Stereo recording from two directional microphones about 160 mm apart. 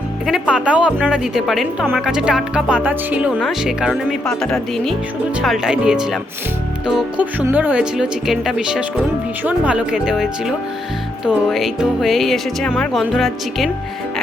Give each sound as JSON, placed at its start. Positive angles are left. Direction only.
{"t": 0.3, "sound": "speech", "side_deg": -5}